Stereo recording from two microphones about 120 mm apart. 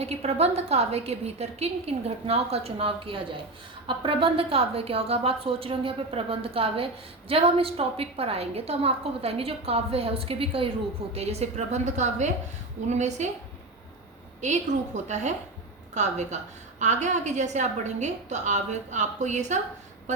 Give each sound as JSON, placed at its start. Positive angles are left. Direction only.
{"t": 0.0, "sound": "a woman's voice", "side_deg": -60}
{"t": 11.1, "sound": "a woman's voice", "side_deg": -60}
{"t": 14.4, "sound": "a woman's voice", "side_deg": -75}